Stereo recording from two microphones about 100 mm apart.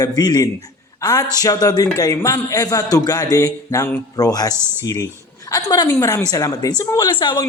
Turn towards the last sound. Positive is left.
turn(degrees=50)  # may be behind; listen again after turning